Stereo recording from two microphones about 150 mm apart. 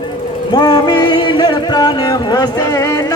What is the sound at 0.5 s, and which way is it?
Music, 25° left (ahead or behind).